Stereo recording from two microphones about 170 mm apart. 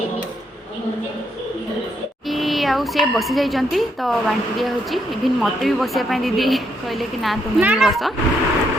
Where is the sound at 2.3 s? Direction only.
Centre (ahead or behind).